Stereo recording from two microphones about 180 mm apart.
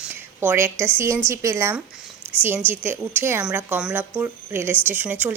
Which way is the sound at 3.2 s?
10° right (ahead or behind).